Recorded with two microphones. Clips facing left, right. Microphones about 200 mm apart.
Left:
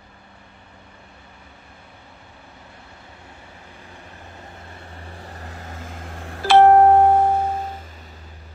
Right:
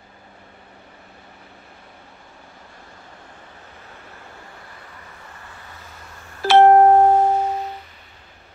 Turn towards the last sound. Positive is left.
turn(degrees=50)  # may be behind; listen again after turning